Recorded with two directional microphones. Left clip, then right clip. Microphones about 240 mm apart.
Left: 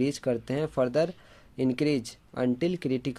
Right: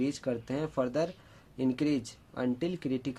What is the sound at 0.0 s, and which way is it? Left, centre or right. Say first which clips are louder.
Speech: left 5 dB; left.